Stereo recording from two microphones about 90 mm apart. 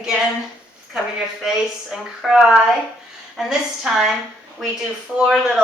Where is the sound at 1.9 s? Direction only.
5° right (ahead or behind).